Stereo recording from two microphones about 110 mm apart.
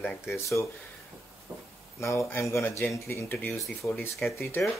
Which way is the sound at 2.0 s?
25° left (ahead or behind).